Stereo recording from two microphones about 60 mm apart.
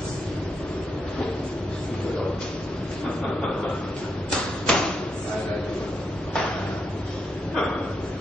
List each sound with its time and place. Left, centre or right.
4.7 s thump: centre